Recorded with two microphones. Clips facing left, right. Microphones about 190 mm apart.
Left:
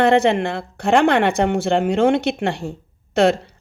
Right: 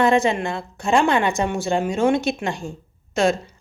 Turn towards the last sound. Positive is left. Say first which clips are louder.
# left 4 dB
turn(degrees=65)  # may be behind; listen again after turning